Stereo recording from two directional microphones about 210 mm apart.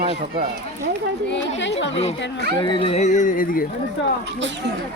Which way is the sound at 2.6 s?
25° left (ahead or behind).